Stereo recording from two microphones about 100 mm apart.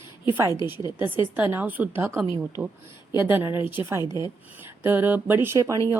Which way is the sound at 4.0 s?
45° left (ahead or behind).